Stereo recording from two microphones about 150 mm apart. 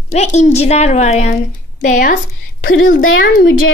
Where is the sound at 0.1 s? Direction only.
50° left (ahead or behind).